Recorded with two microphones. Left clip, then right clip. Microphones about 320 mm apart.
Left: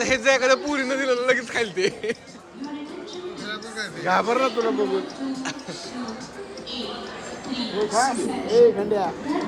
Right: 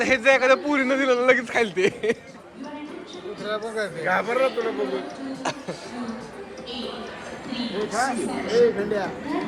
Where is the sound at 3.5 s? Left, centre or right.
Centre.